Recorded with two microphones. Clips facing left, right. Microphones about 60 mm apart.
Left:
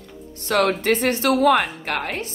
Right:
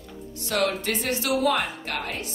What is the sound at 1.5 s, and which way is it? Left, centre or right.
Speech, left.